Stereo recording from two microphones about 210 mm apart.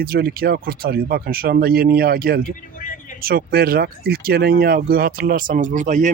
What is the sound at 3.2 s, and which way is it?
Speech, 45° right (ahead or behind).